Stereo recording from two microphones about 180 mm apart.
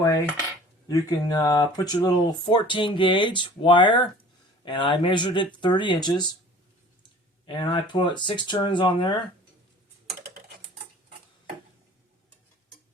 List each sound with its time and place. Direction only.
0.9 s speech: 20° left (ahead or behind)
7.4 s speech: 25° left (ahead or behind)